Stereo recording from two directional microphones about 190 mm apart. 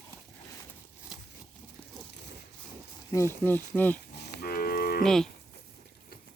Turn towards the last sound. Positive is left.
turn(degrees=0)  # may be behind; listen again after turning